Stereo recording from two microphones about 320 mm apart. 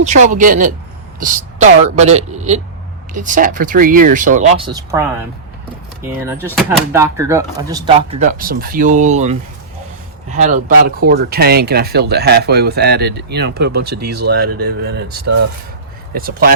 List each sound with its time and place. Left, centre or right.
0.0 s speech: right
6.1 s speech: centre; by 13.9 s right
13.9 s speech: right
14.3 s speech: right